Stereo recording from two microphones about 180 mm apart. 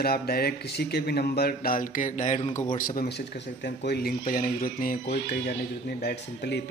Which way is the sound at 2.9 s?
60° left (ahead or behind).